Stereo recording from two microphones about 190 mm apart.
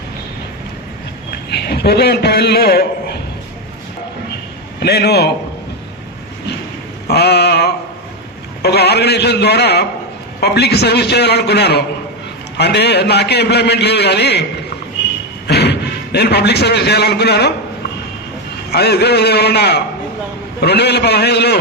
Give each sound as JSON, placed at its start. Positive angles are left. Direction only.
{"t": 1.5, "sound": "a man's voice", "side_deg": 55}
{"t": 4.8, "sound": "a man's voice", "side_deg": 60}
{"t": 7.1, "sound": "a sound", "side_deg": 60}
{"t": 8.6, "sound": "a man's voice", "side_deg": 60}
{"t": 15.4, "sound": "a sound", "side_deg": 60}
{"t": 16.1, "sound": "a man's voice", "side_deg": 60}
{"t": 18.7, "sound": "a man's voice", "side_deg": 60}